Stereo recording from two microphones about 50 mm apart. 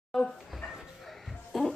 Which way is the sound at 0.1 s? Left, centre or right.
Centre.